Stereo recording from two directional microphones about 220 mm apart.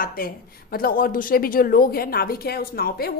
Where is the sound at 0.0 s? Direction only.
40° left (ahead or behind).